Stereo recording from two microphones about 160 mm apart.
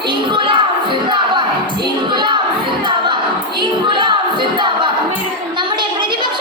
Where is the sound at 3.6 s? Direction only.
30° right (ahead or behind).